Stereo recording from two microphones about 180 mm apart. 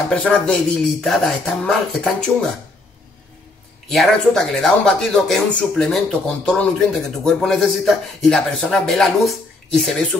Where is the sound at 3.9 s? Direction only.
Centre (ahead or behind).